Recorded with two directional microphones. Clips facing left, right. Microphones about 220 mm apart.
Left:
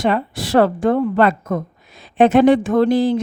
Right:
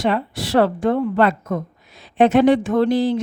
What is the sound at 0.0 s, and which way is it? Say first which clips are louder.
A woman's voice: left 2 dB; 50° left (ahead or behind).